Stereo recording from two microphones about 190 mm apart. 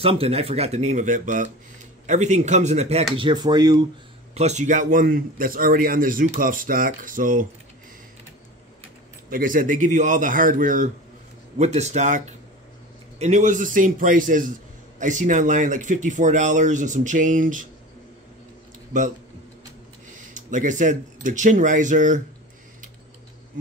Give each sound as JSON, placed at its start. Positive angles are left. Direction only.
{"t": 0.0, "sound": "speech", "side_deg": -30}
{"t": 3.2, "sound": "speech", "side_deg": -25}
{"t": 4.4, "sound": "speech", "side_deg": -35}
{"t": 9.3, "sound": "speech", "side_deg": -45}
{"t": 18.9, "sound": "speech", "side_deg": -40}
{"t": 20.3, "sound": "speech", "side_deg": -40}